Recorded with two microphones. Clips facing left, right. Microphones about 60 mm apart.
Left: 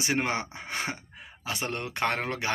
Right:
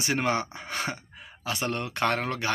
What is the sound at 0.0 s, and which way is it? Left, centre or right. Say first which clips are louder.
Speech: right 2 dB; centre.